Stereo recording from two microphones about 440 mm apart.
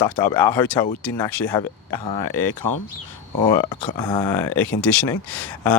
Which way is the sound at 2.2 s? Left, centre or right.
Left.